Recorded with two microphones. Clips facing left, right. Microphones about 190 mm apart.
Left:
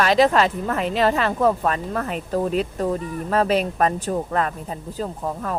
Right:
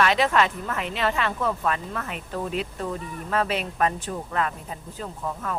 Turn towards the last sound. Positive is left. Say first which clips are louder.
# left 4 dB
turn(degrees=35)  # may be behind; listen again after turning